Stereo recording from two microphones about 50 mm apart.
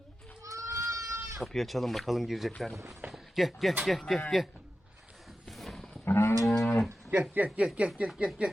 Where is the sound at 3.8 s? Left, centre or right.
Centre.